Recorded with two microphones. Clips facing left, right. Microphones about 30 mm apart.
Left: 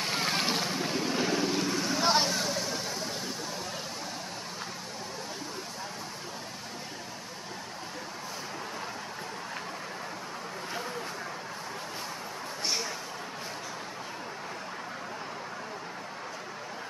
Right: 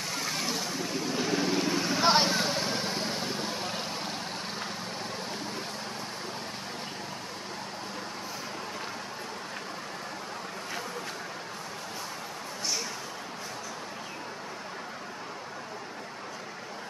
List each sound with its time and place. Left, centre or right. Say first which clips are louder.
0.0 s vehicle: left 3 dB; left
1.3 s vehicle: right 1 dB; centre; by 3.5 s right